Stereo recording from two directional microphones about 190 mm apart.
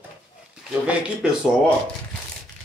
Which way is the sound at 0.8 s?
5° right (ahead or behind).